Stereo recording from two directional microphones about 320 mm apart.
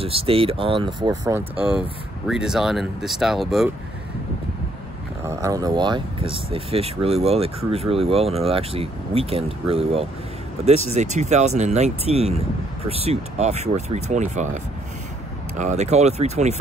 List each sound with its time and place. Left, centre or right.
0.0 s speech: centre
5.2 s speech: centre